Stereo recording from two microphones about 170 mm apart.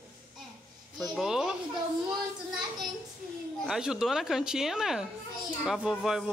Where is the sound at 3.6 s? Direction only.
5° right (ahead or behind).